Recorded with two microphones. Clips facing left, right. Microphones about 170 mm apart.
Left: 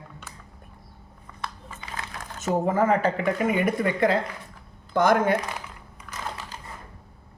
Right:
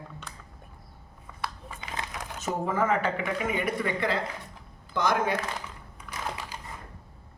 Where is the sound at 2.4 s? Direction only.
40° left (ahead or behind).